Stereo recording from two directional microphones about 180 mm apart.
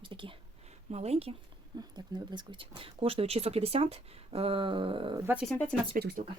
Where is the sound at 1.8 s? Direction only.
25° right (ahead or behind).